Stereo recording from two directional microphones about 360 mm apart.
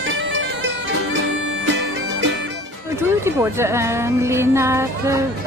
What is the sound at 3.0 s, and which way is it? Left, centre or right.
Speech, centre.